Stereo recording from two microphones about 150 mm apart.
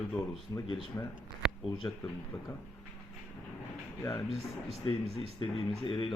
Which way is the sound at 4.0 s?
20° left (ahead or behind).